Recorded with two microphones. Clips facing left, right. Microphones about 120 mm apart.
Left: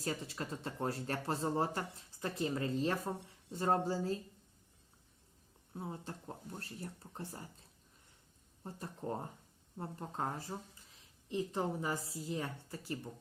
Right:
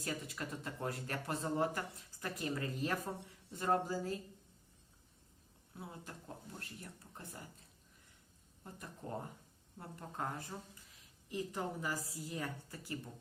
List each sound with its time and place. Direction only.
0.0 s speech: 30° left (ahead or behind)
5.7 s speech: 35° left (ahead or behind)
8.6 s speech: 30° left (ahead or behind)